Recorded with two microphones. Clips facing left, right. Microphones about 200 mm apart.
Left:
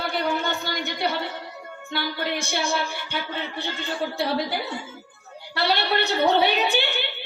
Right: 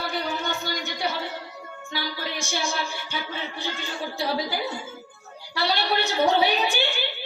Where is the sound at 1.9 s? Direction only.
60° left (ahead or behind).